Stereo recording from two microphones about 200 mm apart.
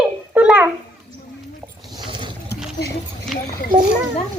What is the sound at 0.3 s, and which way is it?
Babbling, 5° right (ahead or behind).